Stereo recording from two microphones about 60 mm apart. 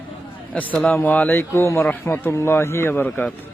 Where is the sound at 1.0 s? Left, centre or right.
Left.